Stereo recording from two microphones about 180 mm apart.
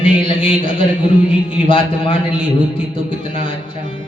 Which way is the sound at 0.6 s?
30° left (ahead or behind).